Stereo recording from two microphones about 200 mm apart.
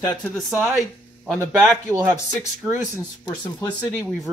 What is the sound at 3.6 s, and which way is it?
Speech, 5° left (ahead or behind).